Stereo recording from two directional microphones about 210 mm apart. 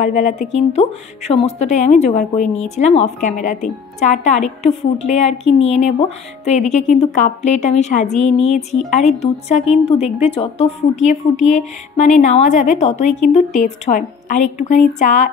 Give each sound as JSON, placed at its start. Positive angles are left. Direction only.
{"t": 0.0, "sound": "a woman's voice", "side_deg": 35}